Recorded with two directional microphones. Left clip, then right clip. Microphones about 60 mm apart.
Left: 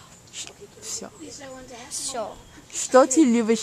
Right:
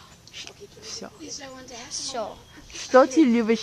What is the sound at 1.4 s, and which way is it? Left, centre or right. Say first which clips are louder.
Speech: even; right.